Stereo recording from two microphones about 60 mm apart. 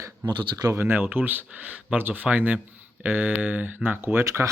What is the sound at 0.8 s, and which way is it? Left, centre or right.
Speech, right.